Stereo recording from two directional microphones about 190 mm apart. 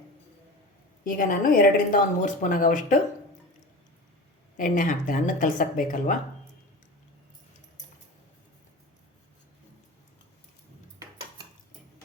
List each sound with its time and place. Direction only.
1.0 s a woman's voice: 45° left (ahead or behind)
4.5 s a woman's voice: 45° left (ahead or behind)